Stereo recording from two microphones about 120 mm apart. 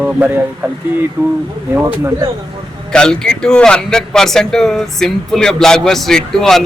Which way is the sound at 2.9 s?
5° left (ahead or behind).